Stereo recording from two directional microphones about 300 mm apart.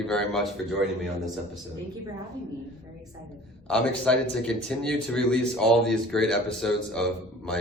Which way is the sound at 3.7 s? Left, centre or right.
Centre.